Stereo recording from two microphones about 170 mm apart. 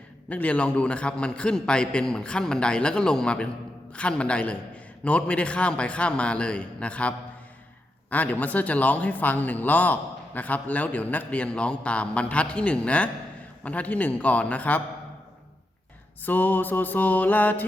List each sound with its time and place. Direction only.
0.3 s a man's voice: 10° left (ahead or behind)
8.1 s a man's voice: 10° left (ahead or behind)
16.2 s a man's voice: 10° left (ahead or behind)